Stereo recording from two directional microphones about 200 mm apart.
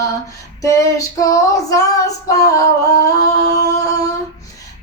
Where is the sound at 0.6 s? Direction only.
15° left (ahead or behind).